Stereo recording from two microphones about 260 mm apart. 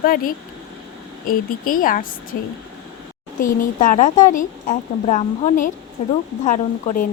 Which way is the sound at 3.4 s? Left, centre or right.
Left.